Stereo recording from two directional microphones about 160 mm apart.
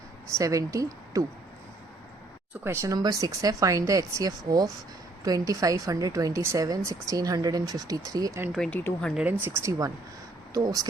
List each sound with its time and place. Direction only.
0.3 s a woman's voice: 20° right (ahead or behind)
2.6 s a woman's voice: 20° right (ahead or behind)
8.5 s speech: 5° left (ahead or behind)
9.1 s a woman's voice: 10° right (ahead or behind)